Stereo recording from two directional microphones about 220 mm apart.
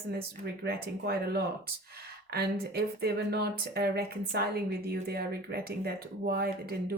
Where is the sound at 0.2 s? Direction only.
45° right (ahead or behind).